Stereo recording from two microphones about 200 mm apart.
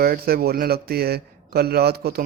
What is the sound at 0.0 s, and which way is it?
A man's voice, 50° right (ahead or behind).